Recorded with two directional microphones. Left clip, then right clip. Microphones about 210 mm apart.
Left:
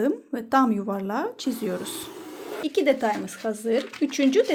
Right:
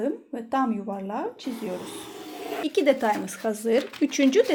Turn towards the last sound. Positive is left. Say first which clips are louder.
# even
turn(degrees=0)  # may be behind; listen again after turning